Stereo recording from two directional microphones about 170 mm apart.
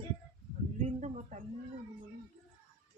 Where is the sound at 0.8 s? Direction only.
40° right (ahead or behind).